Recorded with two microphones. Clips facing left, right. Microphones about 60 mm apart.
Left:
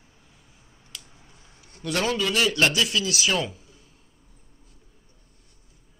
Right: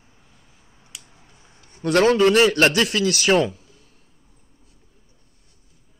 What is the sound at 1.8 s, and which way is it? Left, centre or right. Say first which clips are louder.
A man's voice: right 10 dB; right.